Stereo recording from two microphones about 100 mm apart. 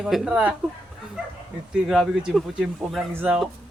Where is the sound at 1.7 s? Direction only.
5° right (ahead or behind).